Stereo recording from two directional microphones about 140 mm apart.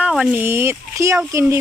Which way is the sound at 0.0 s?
5° right (ahead or behind).